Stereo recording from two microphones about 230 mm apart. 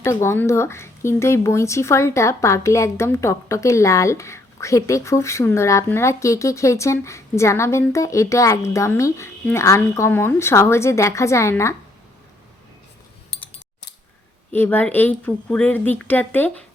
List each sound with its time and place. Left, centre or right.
0.0 s speech: centre
14.5 s speech: centre